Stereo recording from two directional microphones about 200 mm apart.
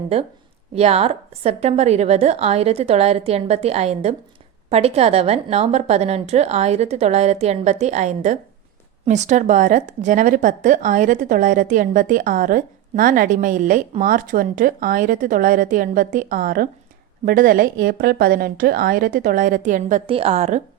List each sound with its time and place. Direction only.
0.8 s a woman's voice: 30° right (ahead or behind)
20.1 s speech: 30° right (ahead or behind)